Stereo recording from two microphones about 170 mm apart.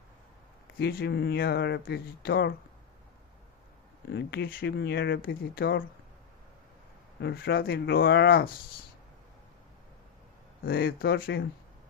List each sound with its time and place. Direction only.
0.8 s speech: 65° left (ahead or behind)
4.1 s speech: 85° left
7.2 s speech: 85° left; by 8.5 s 65° left (ahead or behind)
10.6 s speech: 60° left (ahead or behind)